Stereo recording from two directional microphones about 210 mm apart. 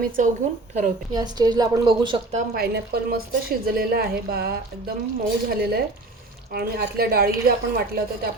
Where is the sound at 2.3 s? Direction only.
45° right (ahead or behind).